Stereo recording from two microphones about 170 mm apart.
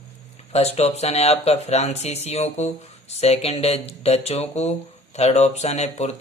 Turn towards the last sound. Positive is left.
turn(degrees=40)  # may be behind; listen again after turning